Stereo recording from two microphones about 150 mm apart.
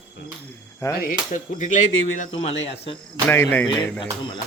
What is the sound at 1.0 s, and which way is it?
Speech, 55° left (ahead or behind).